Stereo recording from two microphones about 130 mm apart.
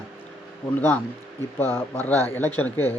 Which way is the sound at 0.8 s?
15° left (ahead or behind).